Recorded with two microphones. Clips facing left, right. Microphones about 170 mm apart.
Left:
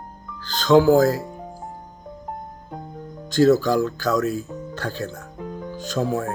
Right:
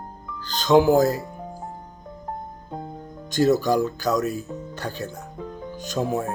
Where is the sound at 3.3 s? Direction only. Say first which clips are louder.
Left 3 dB; 15° right (ahead or behind).